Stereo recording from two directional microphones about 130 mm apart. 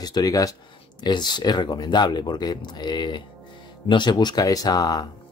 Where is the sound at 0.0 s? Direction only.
30° left (ahead or behind).